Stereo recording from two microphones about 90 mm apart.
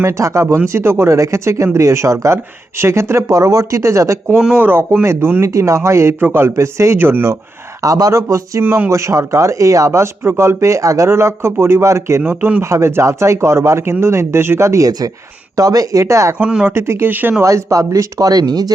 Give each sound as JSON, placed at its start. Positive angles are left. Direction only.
{"t": 0.0, "sound": "speech", "side_deg": -35}
{"t": 4.5, "sound": "speech", "side_deg": -25}
{"t": 7.8, "sound": "speech", "side_deg": -40}
{"t": 8.6, "sound": "speech", "side_deg": -20}
{"t": 8.9, "sound": "speech", "side_deg": -35}
{"t": 12.2, "sound": "speech", "side_deg": -20}
{"t": 16.4, "sound": "speech", "side_deg": -10}
{"t": 16.6, "sound": "speech", "side_deg": -30}
{"t": 17.4, "sound": "speech", "side_deg": -35}